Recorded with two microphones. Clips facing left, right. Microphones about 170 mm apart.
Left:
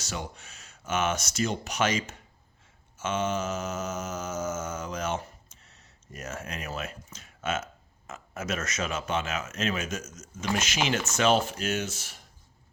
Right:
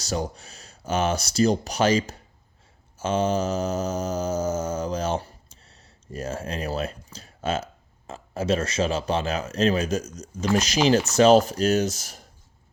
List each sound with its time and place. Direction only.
0.0 s speech: 35° right (ahead or behind)
3.0 s mantra: 35° right (ahead or behind)